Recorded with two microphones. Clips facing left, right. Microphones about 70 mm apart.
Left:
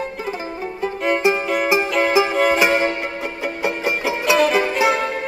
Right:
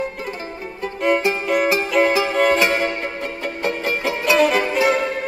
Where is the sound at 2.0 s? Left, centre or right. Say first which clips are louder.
Right 2 dB; centre.